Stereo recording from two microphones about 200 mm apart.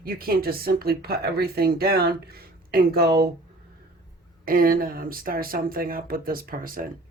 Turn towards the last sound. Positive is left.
turn(degrees=-45)  # may be behind; listen again after turning